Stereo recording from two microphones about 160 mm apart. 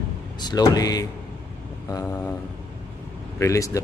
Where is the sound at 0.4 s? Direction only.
25° left (ahead or behind).